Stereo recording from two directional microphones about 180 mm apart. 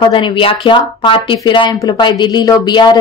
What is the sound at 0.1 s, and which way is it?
A woman's voice, 25° left (ahead or behind).